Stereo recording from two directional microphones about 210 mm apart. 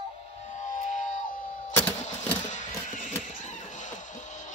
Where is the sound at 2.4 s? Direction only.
35° left (ahead or behind).